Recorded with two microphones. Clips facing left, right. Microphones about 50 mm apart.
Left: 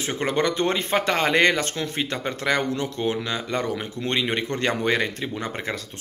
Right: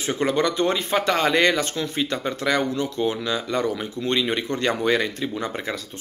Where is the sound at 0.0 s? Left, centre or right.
Left.